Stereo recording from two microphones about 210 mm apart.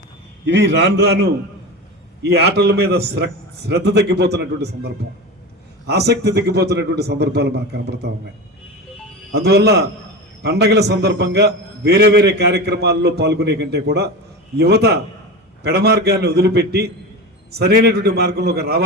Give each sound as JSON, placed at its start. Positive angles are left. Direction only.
{"t": 0.4, "sound": "a man's voice", "side_deg": -55}
{"t": 5.9, "sound": "a man's voice", "side_deg": -50}
{"t": 9.3, "sound": "a man's voice", "side_deg": -50}